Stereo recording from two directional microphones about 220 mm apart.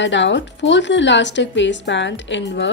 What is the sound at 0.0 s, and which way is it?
Speech, 55° left (ahead or behind).